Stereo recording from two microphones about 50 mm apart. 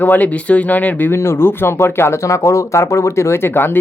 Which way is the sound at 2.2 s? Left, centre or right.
Left.